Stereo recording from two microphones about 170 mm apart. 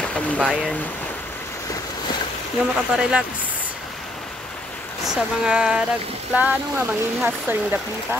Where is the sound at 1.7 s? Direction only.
25° left (ahead or behind).